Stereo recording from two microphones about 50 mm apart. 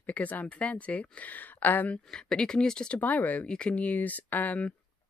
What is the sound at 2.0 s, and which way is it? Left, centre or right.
Speech, centre.